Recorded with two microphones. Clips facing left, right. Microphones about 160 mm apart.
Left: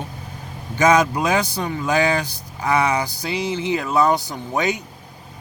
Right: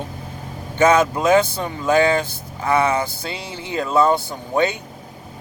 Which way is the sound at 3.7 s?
25° right (ahead or behind).